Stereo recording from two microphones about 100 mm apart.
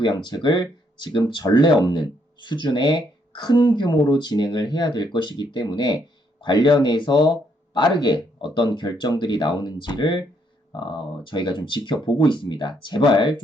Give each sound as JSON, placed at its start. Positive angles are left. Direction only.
{"t": 0.0, "sound": "speech", "side_deg": 45}